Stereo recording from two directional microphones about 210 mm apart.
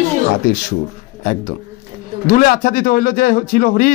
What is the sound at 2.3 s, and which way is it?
A man's voice, 40° left (ahead or behind).